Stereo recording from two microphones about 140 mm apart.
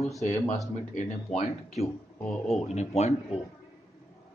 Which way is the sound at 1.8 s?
55° left (ahead or behind).